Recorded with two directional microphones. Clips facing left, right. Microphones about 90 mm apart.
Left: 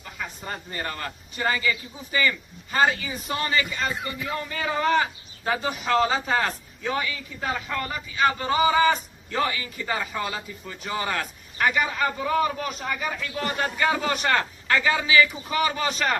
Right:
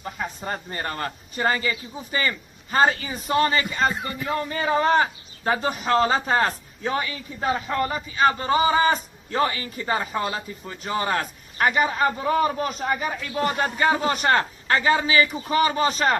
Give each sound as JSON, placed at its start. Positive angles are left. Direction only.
{"t": 0.0, "sound": "a man's voice", "side_deg": -35}
{"t": 2.7, "sound": "a man's voice", "side_deg": -35}